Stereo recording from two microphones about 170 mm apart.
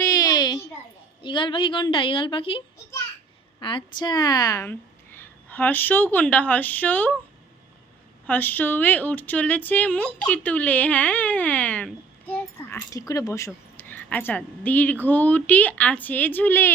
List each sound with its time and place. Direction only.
0.1 s a sound: 25° left (ahead or behind)
1.2 s a woman's voice: 30° left (ahead or behind); by 7.2 s 10° left (ahead or behind)
8.3 s speech: 10° left (ahead or behind)